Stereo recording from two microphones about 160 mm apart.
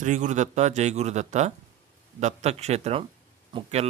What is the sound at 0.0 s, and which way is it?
A man's voice, 50° right (ahead or behind).